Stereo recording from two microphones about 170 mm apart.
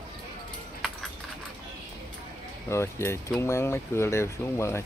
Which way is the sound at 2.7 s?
15° left (ahead or behind).